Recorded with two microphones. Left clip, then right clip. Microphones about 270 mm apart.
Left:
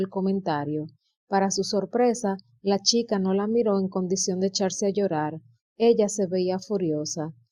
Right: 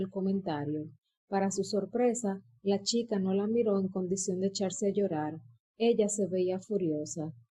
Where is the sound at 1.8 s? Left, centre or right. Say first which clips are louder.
Left 6 dB; left.